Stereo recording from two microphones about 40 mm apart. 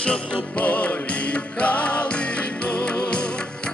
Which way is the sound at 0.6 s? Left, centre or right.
Left.